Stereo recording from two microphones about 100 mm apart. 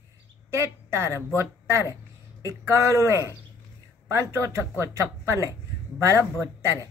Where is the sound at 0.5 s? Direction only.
30° right (ahead or behind).